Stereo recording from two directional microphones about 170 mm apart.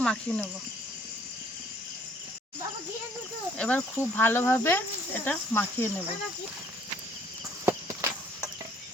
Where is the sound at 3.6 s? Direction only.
10° left (ahead or behind).